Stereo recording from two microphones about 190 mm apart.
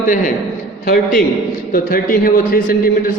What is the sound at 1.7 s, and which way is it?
A man's voice, 50° left (ahead or behind).